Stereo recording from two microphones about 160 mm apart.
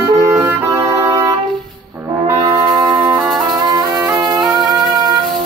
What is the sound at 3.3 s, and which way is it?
Music, 25° right (ahead or behind).